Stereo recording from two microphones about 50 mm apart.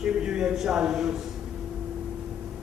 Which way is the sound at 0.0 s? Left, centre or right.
Centre.